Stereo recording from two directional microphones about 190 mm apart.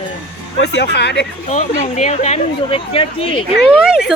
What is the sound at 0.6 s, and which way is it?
Speech, 65° left (ahead or behind).